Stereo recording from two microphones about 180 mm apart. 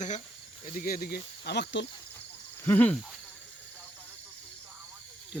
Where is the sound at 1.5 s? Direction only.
70° left (ahead or behind).